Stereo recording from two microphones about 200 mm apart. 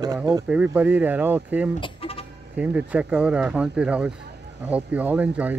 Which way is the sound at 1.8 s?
30° left (ahead or behind).